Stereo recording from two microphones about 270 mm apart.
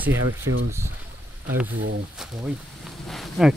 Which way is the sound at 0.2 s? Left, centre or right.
Right.